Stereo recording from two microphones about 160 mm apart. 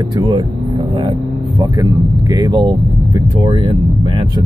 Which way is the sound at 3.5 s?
30° right (ahead or behind).